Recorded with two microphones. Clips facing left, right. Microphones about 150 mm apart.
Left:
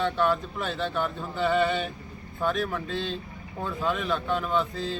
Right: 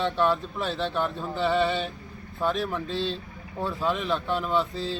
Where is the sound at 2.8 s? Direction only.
35° right (ahead or behind).